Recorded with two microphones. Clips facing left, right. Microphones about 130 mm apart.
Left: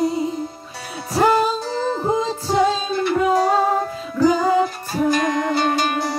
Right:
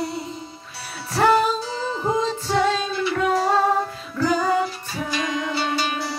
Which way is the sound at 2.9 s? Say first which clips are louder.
Left 4 dB; 50° left (ahead or behind).